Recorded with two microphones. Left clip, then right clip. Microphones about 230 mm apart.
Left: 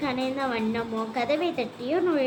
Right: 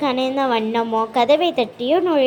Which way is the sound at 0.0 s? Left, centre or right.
Right.